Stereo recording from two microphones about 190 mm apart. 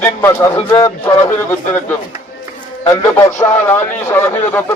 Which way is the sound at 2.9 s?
15° left (ahead or behind).